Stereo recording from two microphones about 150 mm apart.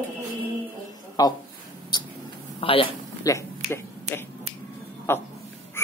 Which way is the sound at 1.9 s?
30° left (ahead or behind).